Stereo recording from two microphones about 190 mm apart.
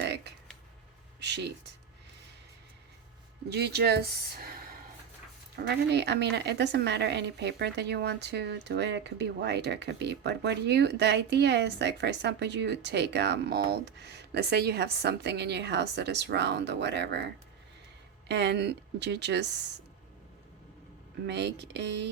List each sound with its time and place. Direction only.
0.0 s a sound: 60° right (ahead or behind)
1.2 s speech: 65° right (ahead or behind)
3.5 s a woman's voice: 60° right (ahead or behind)
5.5 s a woman's voice: 60° right (ahead or behind)
21.2 s a woman's voice: 65° right (ahead or behind)